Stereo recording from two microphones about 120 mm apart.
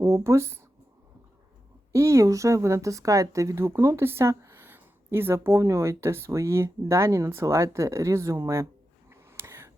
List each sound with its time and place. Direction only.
0.0 s speech: 25° right (ahead or behind)
1.9 s speech: 25° right (ahead or behind)
9.0 s a sound: 20° right (ahead or behind)